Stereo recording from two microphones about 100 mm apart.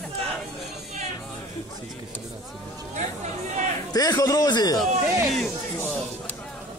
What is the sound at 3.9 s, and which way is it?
Speech, 40° left (ahead or behind).